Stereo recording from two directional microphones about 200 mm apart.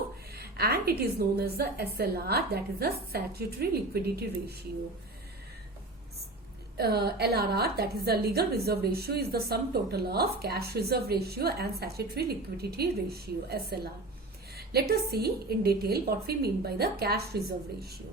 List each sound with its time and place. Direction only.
0.3 s a woman's voice: 50° right (ahead or behind)
6.7 s a woman's voice: 55° right (ahead or behind)